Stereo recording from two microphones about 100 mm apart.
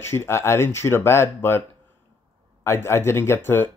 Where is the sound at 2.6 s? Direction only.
25° left (ahead or behind).